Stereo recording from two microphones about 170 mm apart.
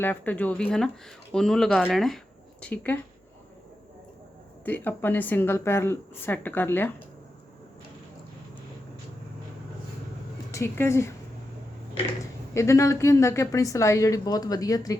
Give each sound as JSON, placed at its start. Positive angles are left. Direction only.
{"t": 0.0, "sound": "speech", "side_deg": 10}
{"t": 4.6, "sound": "a woman's voice", "side_deg": 10}
{"t": 10.5, "sound": "a woman's voice", "side_deg": 15}
{"t": 12.5, "sound": "a woman's voice", "side_deg": 15}